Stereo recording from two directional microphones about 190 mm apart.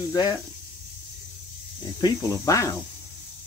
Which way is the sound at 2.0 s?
15° left (ahead or behind).